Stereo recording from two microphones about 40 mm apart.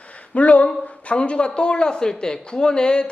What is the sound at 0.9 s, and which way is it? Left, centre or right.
Speech, left.